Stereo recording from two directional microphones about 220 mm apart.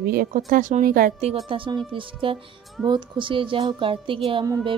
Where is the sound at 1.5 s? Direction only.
20° right (ahead or behind).